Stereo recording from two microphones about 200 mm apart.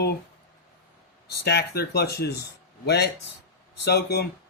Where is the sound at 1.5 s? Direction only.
55° left (ahead or behind).